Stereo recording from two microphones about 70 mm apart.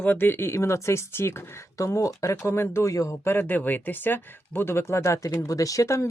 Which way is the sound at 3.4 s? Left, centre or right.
Left.